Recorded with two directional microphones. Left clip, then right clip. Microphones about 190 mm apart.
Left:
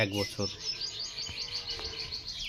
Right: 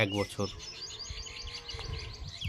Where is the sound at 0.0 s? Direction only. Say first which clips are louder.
Even; 20° right (ahead or behind).